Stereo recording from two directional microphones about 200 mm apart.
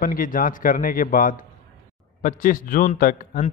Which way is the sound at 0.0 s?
45° left (ahead or behind).